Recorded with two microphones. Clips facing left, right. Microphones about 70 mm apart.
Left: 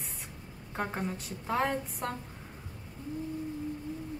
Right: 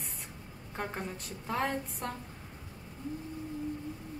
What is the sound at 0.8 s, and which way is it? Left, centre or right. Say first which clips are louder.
A woman's voice: left 3 dB; centre.